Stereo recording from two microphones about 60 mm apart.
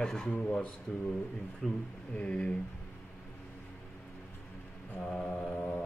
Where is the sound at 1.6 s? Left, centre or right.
Centre.